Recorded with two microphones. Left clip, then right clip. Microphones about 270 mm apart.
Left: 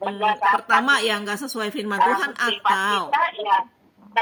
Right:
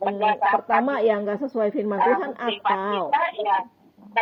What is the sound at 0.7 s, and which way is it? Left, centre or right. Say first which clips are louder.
Speech: left 2 dB; left.